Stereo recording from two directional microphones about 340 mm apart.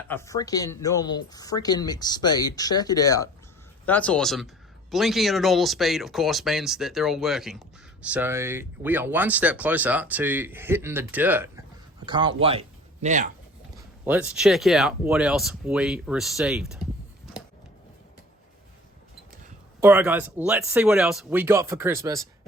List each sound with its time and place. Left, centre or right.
0.1 s speech: centre; by 13.3 s right
14.0 s speech: centre
19.8 s speech: centre